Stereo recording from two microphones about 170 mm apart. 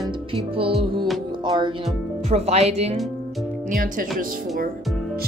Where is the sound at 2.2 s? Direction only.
40° right (ahead or behind).